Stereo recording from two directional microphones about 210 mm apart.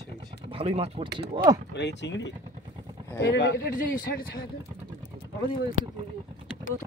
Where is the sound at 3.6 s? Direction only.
45° left (ahead or behind).